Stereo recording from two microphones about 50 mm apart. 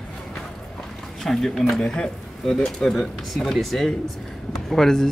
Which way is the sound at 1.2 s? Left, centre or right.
Centre.